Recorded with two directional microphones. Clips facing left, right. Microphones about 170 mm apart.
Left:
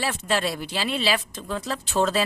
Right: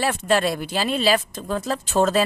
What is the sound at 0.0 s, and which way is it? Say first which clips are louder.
Speech: right 5 dB; 50° right (ahead or behind).